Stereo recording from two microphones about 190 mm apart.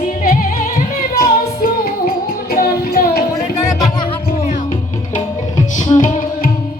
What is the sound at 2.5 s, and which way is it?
Child singing, 50° left (ahead or behind).